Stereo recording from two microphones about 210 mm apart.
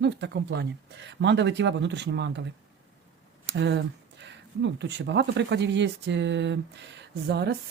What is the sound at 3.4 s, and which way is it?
Speech, 55° right (ahead or behind).